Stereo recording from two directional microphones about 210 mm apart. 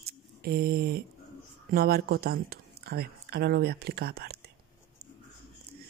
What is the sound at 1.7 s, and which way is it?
Speech, 45° right (ahead or behind).